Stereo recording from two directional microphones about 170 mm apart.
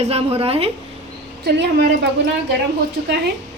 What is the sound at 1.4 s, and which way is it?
Speech, 80° right.